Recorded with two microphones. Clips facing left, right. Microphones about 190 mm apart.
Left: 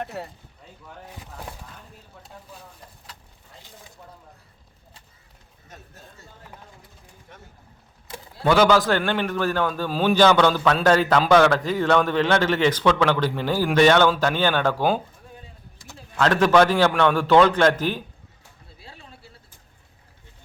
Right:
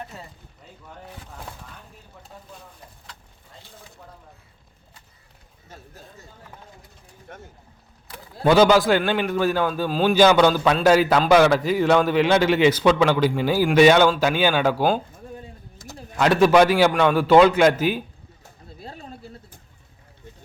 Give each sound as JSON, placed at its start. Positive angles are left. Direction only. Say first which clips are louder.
{"t": 0.0, "sound": "speech", "louder": "left 6 dB", "side_deg": 65}
{"t": 7.3, "sound": "speech", "louder": "right 7 dB", "side_deg": -50}
{"t": 8.4, "sound": "a man's voice", "louder": "right 2 dB", "side_deg": -15}
{"t": 10.2, "sound": "a man's voice", "louder": "right 2 dB", "side_deg": -10}
{"t": 15.8, "sound": "a sound", "louder": "right 5 dB", "side_deg": -45}
{"t": 16.1, "sound": "a man's voice", "louder": "right 2 dB", "side_deg": -10}
{"t": 18.8, "sound": "a sound", "louder": "right 8 dB", "side_deg": -45}